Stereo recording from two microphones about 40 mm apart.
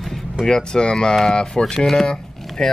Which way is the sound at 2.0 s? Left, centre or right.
Centre.